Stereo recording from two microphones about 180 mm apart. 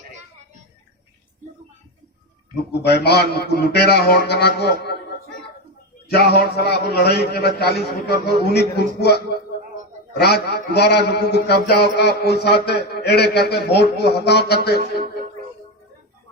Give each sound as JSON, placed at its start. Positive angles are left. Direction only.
{"t": 2.8, "sound": "a man's voice", "side_deg": 65}
{"t": 6.3, "sound": "a man's voice", "side_deg": 60}